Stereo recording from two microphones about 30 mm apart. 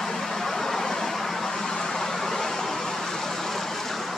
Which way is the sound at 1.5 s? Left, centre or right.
Left.